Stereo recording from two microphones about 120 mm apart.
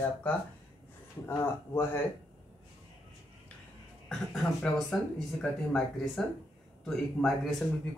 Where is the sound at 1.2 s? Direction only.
20° left (ahead or behind).